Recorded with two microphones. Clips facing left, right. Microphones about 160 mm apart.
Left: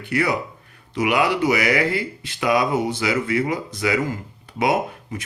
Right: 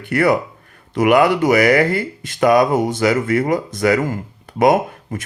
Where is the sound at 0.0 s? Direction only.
50° right (ahead or behind).